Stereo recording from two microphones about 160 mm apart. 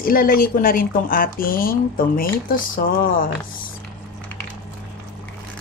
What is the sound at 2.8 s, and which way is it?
Speech, 60° left (ahead or behind).